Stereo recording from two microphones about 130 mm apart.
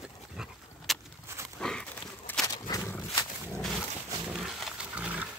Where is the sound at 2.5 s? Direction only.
30° left (ahead or behind).